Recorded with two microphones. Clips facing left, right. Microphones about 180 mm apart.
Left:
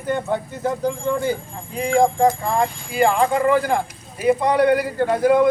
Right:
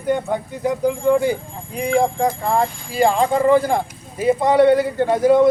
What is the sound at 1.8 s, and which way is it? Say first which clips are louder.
Speech: left 1 dB; 10° right (ahead or behind).